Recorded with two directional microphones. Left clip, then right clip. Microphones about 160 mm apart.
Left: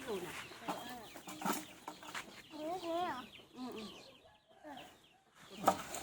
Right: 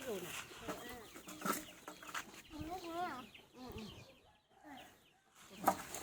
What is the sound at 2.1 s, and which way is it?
Chicken, 90° right.